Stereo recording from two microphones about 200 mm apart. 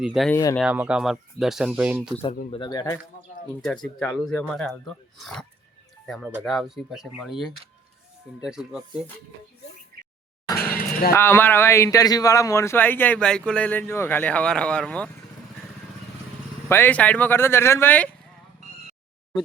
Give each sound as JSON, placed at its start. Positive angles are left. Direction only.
{"t": 0.0, "sound": "speech", "side_deg": 0}
{"t": 2.3, "sound": "speech", "side_deg": 40}
{"t": 2.6, "sound": "speech", "side_deg": 20}
{"t": 3.6, "sound": "speech", "side_deg": 5}
{"t": 8.4, "sound": "speech", "side_deg": -5}
{"t": 10.6, "sound": "a sound", "side_deg": 50}
{"t": 11.1, "sound": "a man's voice", "side_deg": 10}
{"t": 16.6, "sound": "a man's voice", "side_deg": 10}